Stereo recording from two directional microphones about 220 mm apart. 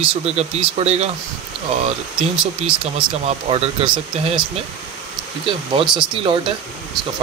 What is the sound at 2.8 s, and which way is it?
Speech, 25° right (ahead or behind).